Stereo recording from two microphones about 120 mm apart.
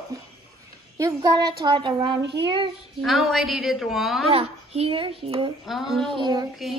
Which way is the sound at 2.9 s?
Centre (ahead or behind).